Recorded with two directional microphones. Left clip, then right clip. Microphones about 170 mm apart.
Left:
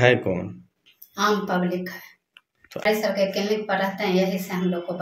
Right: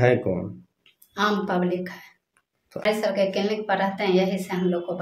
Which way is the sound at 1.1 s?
30° right (ahead or behind).